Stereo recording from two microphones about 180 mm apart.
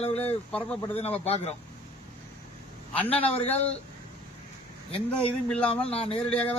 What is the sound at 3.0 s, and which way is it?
Speech, 10° left (ahead or behind).